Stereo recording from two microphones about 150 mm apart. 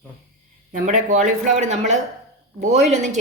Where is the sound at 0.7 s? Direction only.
55° right (ahead or behind).